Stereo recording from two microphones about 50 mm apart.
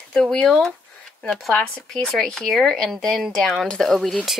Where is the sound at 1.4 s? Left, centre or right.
Centre.